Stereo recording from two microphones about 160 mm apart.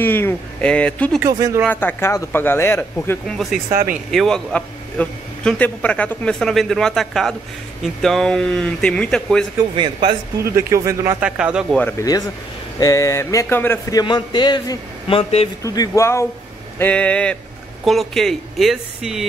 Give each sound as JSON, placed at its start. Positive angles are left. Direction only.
{"t": 0.0, "sound": "speech", "side_deg": 10}
{"t": 1.2, "sound": "speech", "side_deg": -20}
{"t": 1.7, "sound": "speech", "side_deg": 10}
{"t": 3.3, "sound": "a man's voice", "side_deg": 0}
{"t": 9.8, "sound": "speech", "side_deg": -30}
{"t": 10.4, "sound": "speech", "side_deg": -20}
{"t": 11.1, "sound": "speech", "side_deg": -5}
{"t": 11.8, "sound": "speech", "side_deg": 20}
{"t": 15.6, "sound": "a man's voice", "side_deg": 20}